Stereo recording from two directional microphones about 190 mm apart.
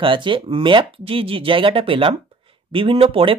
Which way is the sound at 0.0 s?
25° right (ahead or behind).